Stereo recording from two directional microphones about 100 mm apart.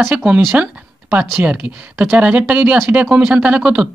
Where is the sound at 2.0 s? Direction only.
15° right (ahead or behind).